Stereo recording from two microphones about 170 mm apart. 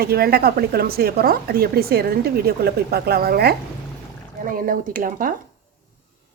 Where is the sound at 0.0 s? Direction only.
65° right (ahead or behind).